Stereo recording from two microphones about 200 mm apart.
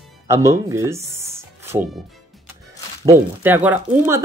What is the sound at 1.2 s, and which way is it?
Music, 15° right (ahead or behind).